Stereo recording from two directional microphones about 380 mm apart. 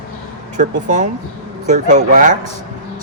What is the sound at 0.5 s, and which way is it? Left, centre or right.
Speech, centre.